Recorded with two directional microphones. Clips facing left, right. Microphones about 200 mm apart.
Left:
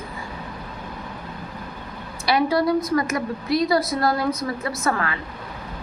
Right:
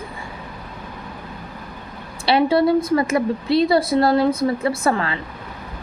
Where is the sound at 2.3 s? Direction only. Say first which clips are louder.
Right 4 dB; 25° right (ahead or behind).